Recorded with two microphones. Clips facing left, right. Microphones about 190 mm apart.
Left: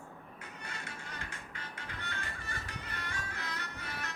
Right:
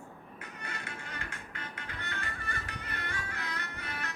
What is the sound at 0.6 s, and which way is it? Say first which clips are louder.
Music: right 3 dB; 60° right (ahead or behind).